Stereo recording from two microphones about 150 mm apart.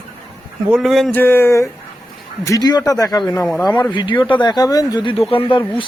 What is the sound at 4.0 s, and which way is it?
Speech, 30° left (ahead or behind).